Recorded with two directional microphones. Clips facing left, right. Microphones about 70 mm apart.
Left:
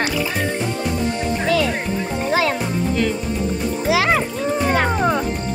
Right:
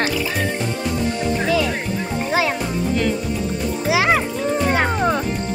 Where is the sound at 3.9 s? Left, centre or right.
Centre.